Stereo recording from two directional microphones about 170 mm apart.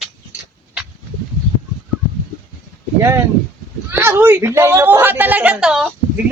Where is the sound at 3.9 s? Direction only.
15° right (ahead or behind).